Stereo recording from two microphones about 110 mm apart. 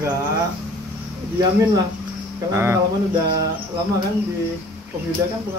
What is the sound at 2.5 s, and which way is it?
Speech, 20° right (ahead or behind).